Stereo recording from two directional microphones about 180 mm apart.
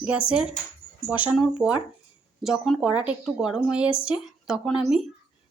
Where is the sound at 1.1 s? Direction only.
10° right (ahead or behind).